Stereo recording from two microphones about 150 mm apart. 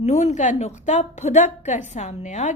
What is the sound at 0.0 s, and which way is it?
A woman's voice, 50° left (ahead or behind).